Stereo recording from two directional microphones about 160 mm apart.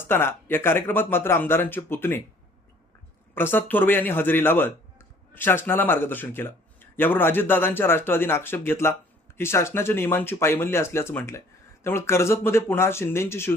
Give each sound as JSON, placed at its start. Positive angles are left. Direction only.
{"t": 0.0, "sound": "a man's voice", "side_deg": 15}
{"t": 3.3, "sound": "a man's voice", "side_deg": 15}